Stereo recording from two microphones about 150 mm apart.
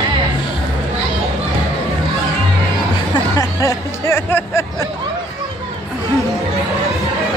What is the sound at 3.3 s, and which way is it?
Music, 20° left (ahead or behind).